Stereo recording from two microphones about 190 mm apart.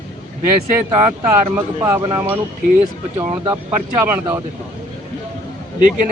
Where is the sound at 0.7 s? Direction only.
15° right (ahead or behind).